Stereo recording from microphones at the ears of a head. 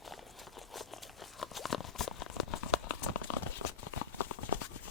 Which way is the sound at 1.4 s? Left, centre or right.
Left.